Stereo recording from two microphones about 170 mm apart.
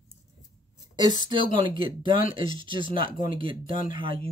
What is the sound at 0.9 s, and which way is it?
Speech, 25° right (ahead or behind).